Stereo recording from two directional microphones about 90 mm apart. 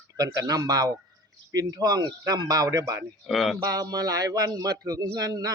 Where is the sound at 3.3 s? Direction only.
Centre (ahead or behind).